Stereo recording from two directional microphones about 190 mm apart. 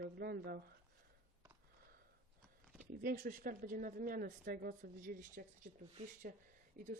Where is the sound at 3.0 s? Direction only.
50° right (ahead or behind).